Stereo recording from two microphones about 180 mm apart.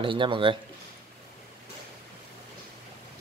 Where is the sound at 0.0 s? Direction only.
30° right (ahead or behind).